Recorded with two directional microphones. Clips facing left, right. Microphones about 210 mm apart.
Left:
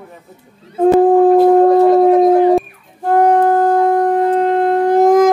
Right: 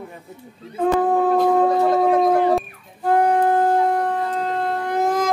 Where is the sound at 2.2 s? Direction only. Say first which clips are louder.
Left 7 dB; 15° left (ahead or behind).